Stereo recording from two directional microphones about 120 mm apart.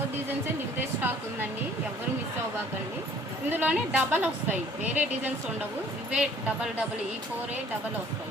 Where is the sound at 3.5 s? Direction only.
15° right (ahead or behind).